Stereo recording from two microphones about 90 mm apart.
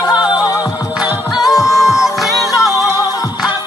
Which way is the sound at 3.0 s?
45° left (ahead or behind).